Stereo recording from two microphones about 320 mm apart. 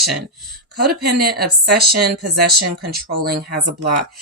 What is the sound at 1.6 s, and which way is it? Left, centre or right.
Speech, right.